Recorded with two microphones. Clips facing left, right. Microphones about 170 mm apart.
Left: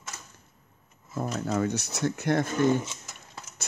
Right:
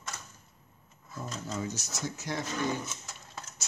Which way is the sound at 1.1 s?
60° left (ahead or behind).